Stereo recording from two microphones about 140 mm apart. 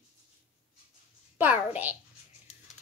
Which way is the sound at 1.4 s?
15° right (ahead or behind).